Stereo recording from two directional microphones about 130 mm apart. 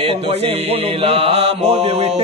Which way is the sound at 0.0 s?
50° right (ahead or behind).